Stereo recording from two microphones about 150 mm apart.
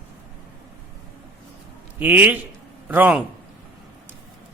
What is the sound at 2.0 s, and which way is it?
A man's voice, 10° right (ahead or behind).